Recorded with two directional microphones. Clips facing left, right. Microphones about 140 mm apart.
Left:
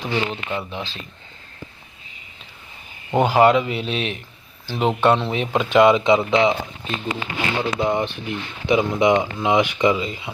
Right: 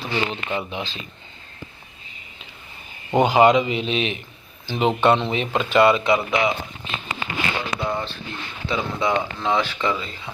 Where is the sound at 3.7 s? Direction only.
5° left (ahead or behind); by 6.5 s 25° left (ahead or behind).